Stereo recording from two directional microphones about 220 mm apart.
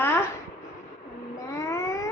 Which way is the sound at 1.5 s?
15° left (ahead or behind).